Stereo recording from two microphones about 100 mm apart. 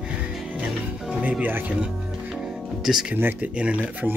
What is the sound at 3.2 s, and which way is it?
Speech, 20° right (ahead or behind).